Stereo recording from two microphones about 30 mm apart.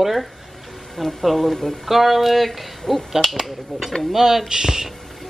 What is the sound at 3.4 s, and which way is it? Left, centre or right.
Speech, centre.